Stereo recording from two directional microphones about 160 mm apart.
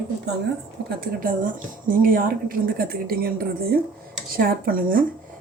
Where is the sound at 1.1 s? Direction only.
60° right (ahead or behind).